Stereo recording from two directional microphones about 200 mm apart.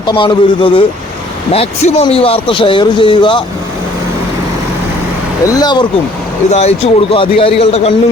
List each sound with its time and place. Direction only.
0.0 s a man's voice: 20° left (ahead or behind)
5.5 s a man's voice: 20° left (ahead or behind)
6.5 s a man's voice: 30° left (ahead or behind)